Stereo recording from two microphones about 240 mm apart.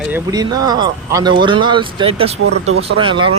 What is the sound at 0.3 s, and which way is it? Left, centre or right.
Speech, centre.